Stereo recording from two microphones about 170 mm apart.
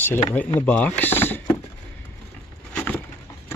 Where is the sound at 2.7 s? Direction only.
10° left (ahead or behind).